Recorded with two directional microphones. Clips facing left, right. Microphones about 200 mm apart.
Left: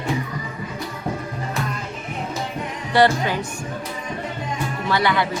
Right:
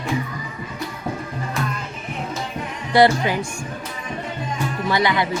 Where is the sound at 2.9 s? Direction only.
15° right (ahead or behind).